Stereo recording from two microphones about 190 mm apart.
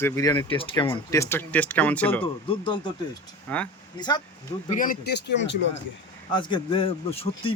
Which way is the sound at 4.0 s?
20° left (ahead or behind).